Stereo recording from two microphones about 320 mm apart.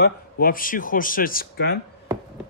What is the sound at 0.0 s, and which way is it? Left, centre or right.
Speech, left.